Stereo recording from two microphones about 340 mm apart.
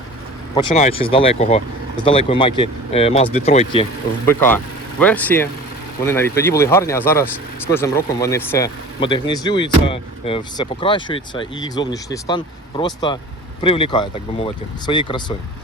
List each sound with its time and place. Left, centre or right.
0.5 s speech: centre
4.3 s speech: centre